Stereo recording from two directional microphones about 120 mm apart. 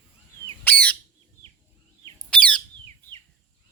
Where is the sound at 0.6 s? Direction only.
15° left (ahead or behind).